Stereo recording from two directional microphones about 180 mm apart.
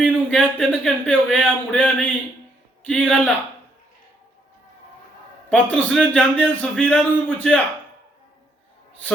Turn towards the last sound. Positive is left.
turn(degrees=5)  # may be behind; listen again after turning